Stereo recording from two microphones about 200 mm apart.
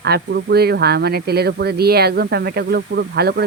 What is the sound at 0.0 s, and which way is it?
Speech, 55° right (ahead or behind).